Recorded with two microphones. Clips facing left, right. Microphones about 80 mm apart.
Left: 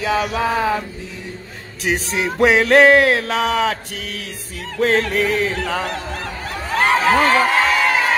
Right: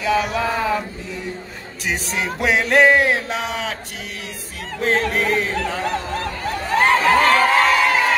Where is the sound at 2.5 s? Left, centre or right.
Left.